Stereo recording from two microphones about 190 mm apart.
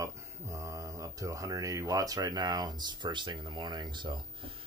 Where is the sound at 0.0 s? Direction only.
15° right (ahead or behind).